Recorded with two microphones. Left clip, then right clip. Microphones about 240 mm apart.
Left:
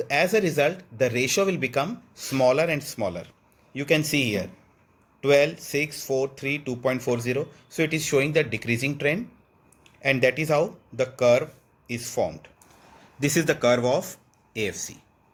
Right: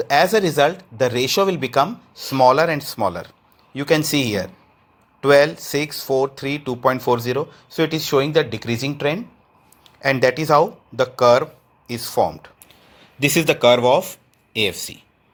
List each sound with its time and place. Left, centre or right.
0.0 s speech: centre